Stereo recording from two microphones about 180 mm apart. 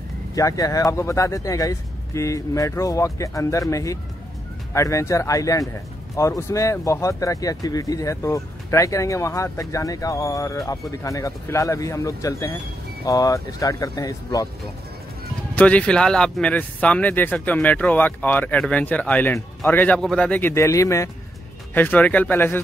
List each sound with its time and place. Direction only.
0.4 s speech: 20° left (ahead or behind)
15.5 s speech: 5° left (ahead or behind)